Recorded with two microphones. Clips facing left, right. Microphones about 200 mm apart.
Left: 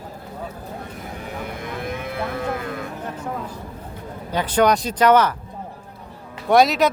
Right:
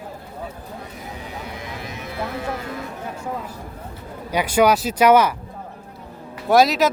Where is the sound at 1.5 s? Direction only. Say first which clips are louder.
Left 4 dB; 55° left (ahead or behind).